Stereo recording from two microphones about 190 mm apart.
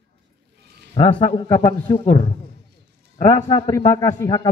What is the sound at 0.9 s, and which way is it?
Speech, 30° left (ahead or behind).